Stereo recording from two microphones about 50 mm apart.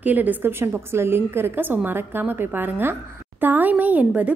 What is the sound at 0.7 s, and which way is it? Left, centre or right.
A woman's voice, right.